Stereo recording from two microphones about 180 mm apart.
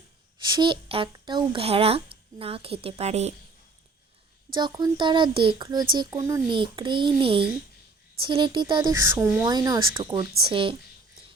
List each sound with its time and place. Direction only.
0.4 s speech: 25° right (ahead or behind)
4.4 s speech: 25° right (ahead or behind)